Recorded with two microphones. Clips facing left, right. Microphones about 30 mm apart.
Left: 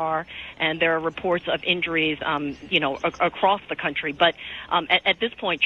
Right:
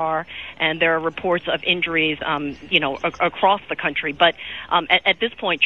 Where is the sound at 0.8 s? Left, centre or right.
Centre.